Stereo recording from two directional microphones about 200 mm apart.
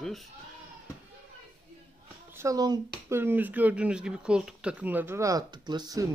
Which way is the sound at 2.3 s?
15° right (ahead or behind).